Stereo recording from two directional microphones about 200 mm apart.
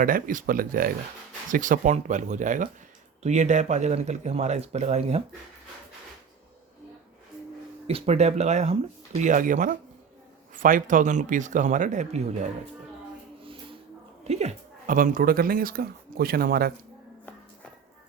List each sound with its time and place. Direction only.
0.0 s speech: 45° right (ahead or behind)
7.9 s speech: 30° right (ahead or behind)
14.3 s speech: 35° right (ahead or behind); by 16.7 s 50° right (ahead or behind)